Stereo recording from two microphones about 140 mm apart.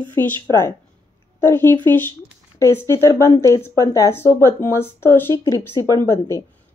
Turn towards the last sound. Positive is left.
turn(degrees=20)  # may be behind; listen again after turning